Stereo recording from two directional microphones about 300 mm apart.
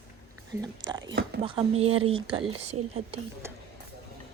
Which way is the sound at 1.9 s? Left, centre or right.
Right.